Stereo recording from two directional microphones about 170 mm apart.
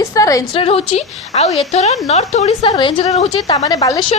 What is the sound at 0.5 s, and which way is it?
A woman's voice, 35° left (ahead or behind).